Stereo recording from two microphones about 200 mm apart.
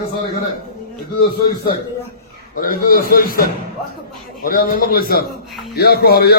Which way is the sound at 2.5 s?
45° left (ahead or behind).